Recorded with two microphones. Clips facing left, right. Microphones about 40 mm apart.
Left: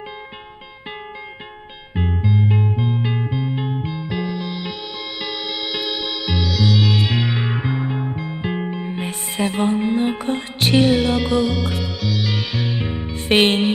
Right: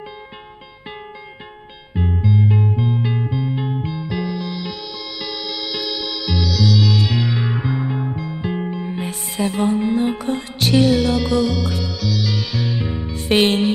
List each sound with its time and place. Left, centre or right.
2.0 s music: left